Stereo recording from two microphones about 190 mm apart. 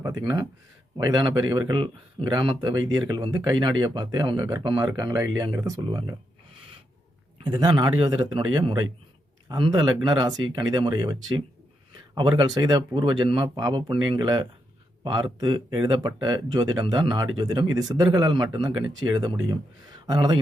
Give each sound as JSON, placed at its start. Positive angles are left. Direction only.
{"t": 0.0, "sound": "speech", "side_deg": -20}
{"t": 7.4, "sound": "speech", "side_deg": -25}